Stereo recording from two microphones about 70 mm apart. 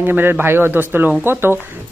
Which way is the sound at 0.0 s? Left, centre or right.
Right.